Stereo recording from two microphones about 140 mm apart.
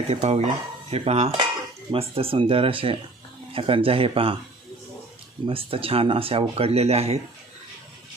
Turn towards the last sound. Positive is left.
turn(degrees=-50)  # may be behind; listen again after turning